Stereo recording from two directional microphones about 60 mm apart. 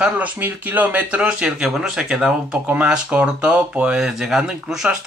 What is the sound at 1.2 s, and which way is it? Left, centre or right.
Speech, centre.